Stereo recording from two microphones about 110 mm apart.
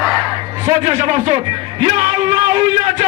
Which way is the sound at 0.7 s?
65° right (ahead or behind).